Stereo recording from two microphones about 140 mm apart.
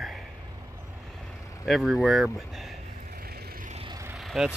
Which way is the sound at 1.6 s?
Centre (ahead or behind).